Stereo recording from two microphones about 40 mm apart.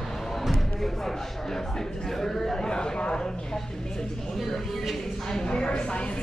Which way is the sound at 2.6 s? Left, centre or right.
Left.